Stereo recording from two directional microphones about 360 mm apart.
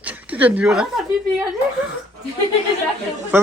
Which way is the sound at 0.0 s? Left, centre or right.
Centre.